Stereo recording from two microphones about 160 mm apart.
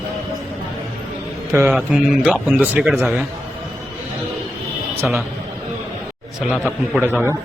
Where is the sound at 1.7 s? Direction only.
5° right (ahead or behind).